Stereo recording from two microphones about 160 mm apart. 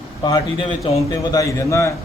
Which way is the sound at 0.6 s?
40° left (ahead or behind).